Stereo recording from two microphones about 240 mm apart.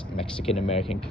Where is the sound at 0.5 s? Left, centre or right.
Left.